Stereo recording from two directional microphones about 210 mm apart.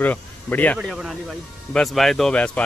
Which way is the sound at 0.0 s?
10° left (ahead or behind).